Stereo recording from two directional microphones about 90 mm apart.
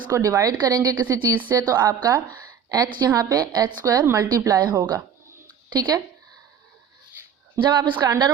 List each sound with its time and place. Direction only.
0.1 s a woman's voice: 40° right (ahead or behind)
1.0 s a woman's voice: 25° right (ahead or behind)
1.5 s a woman's voice: 40° right (ahead or behind)
7.6 s a woman's voice: 60° right (ahead or behind)
8.0 s a woman's voice: 45° right (ahead or behind)